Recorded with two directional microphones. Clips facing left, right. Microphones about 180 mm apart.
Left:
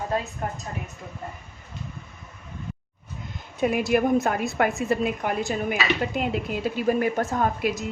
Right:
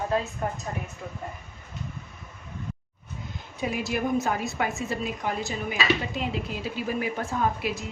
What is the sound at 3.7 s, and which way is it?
A woman's voice, 55° left (ahead or behind).